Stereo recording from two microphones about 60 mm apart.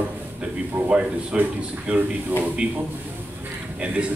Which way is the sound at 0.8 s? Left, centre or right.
Centre.